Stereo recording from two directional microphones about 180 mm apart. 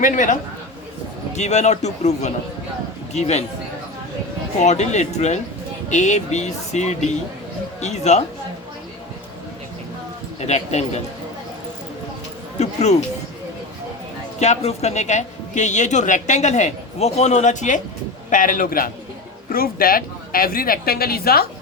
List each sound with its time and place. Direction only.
0.0 s a man's voice: 45° left (ahead or behind)
4.6 s speech: 40° left (ahead or behind)
10.4 s speech: 40° left (ahead or behind)
12.5 s a sound: 40° left (ahead or behind)
14.3 s a man's voice: 40° left (ahead or behind); by 21.4 s 60° left (ahead or behind)